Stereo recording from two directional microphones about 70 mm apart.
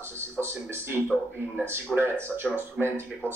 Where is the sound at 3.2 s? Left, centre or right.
Centre.